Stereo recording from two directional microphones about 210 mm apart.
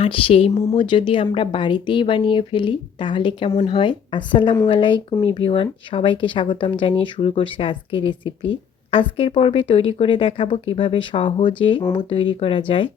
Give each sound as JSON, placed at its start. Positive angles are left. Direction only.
{"t": 0.0, "sound": "speech", "side_deg": 25}